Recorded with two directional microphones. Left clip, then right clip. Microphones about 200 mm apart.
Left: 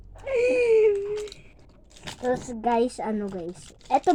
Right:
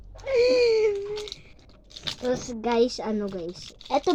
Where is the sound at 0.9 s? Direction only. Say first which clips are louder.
Left 3 dB; 55° right (ahead or behind).